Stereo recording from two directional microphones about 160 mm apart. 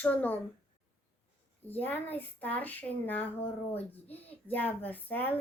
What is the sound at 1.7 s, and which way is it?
Speech, 10° left (ahead or behind).